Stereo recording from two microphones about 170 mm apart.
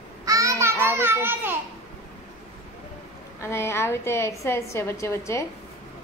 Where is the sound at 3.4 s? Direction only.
15° left (ahead or behind).